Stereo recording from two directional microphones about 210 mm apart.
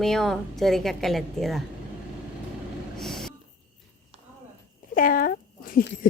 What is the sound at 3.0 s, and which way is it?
Train, centre (ahead or behind).